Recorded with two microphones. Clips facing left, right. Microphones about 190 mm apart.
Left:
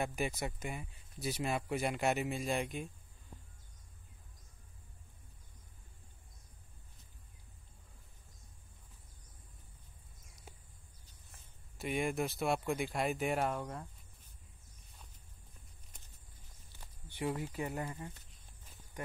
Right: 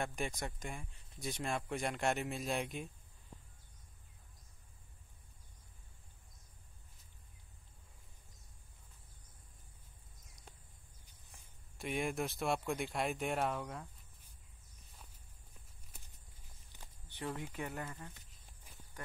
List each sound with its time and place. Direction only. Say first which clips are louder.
0.0 s speech: left 3 dB; 5° left (ahead or behind)
11.1 s a sound: left 1 dB; 15° right (ahead or behind)
11.8 s speech: left 2 dB; centre (ahead or behind)
15.9 s walk: right 3 dB; 5° right (ahead or behind)
17.1 s speech: left 5 dB; 10° left (ahead or behind)